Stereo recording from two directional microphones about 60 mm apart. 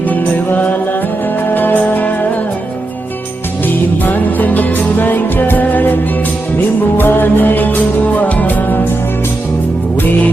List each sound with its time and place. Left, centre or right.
0.1 s music: left
4.0 s music: left